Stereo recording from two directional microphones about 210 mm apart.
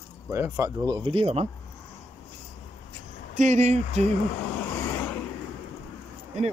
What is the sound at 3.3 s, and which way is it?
Speech, 35° right (ahead or behind).